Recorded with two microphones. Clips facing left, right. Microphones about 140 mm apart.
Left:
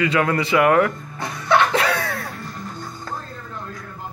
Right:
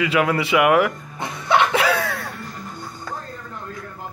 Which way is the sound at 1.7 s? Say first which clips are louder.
Right 1 dB; centre (ahead or behind).